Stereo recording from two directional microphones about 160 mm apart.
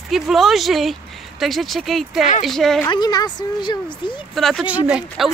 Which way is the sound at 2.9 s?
25° left (ahead or behind).